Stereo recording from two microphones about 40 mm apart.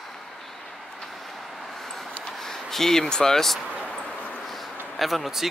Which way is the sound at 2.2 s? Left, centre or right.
Centre.